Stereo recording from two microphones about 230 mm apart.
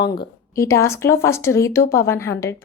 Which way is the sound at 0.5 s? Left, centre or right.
Centre.